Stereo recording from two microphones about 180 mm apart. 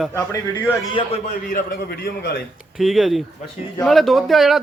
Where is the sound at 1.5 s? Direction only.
55° left (ahead or behind).